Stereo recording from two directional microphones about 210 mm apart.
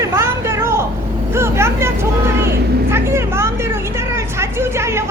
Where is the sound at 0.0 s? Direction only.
15° right (ahead or behind).